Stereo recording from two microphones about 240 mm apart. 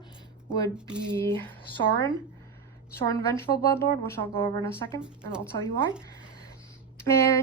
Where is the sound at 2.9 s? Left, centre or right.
Centre.